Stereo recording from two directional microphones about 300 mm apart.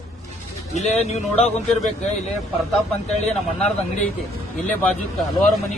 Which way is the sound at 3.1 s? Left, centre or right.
Left.